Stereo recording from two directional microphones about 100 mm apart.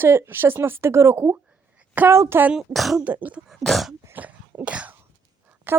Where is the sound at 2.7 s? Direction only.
Centre (ahead or behind).